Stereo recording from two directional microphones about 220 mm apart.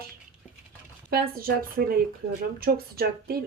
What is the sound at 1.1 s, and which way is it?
Speech, 40° right (ahead or behind).